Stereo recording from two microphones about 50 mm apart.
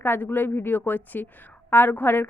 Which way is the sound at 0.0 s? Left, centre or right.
Left.